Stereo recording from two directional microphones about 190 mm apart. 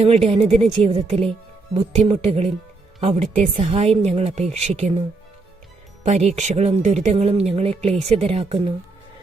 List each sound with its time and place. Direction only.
0.0 s speech: 30° right (ahead or behind)